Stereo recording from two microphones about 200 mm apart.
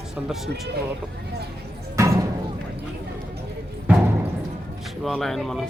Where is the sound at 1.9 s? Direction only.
15° right (ahead or behind).